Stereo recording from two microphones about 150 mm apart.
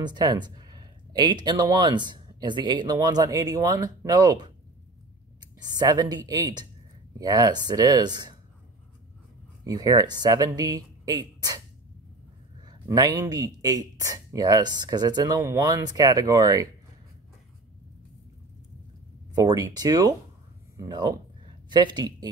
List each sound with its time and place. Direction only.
0.0 s speech: 30° right (ahead or behind)
9.7 s speech: 25° right (ahead or behind)
12.6 s speech: 25° right (ahead or behind)
19.3 s speech: 25° right (ahead or behind)